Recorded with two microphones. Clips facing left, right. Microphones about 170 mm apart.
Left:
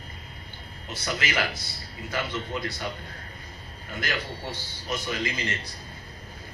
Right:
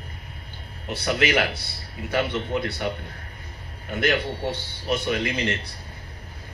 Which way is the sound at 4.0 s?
60° right (ahead or behind).